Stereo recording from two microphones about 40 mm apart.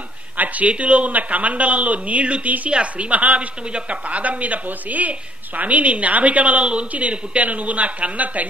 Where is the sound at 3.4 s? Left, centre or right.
Right.